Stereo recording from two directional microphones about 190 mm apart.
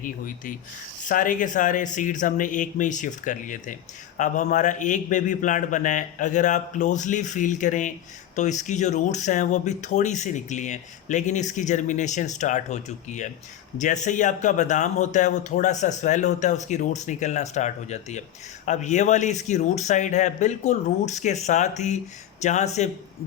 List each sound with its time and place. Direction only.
0.0 s speech: 45° left (ahead or behind)